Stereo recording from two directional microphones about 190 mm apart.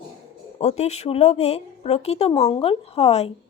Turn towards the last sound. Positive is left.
turn(degrees=30)  # may be behind; listen again after turning